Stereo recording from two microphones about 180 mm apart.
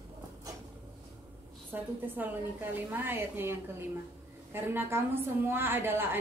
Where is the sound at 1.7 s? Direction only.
10° right (ahead or behind).